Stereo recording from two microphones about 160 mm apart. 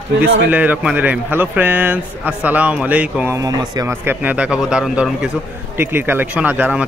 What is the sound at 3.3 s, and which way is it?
Speech, 20° right (ahead or behind).